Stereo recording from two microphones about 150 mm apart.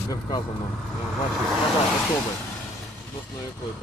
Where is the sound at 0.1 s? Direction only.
25° left (ahead or behind).